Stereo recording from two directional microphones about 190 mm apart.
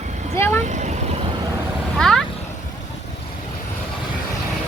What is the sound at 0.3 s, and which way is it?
Speech, 10° left (ahead or behind).